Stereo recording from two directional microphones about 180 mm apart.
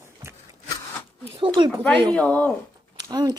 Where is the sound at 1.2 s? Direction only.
30° right (ahead or behind).